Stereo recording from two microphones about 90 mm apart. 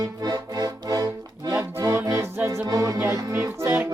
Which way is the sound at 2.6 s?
45° right (ahead or behind).